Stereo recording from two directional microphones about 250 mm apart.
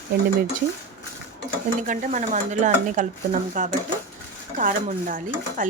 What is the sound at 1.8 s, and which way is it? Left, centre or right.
Speech, right.